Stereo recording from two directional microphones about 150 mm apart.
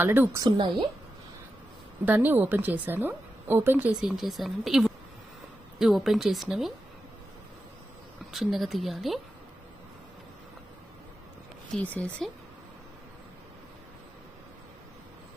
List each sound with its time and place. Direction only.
0.0 s a woman's voice: 15° right (ahead or behind)
0.4 s a woman's voice: 30° right (ahead or behind)
2.0 s a woman's voice: 10° right (ahead or behind)
8.3 s speech: centre (ahead or behind)
11.7 s speech: 10° left (ahead or behind)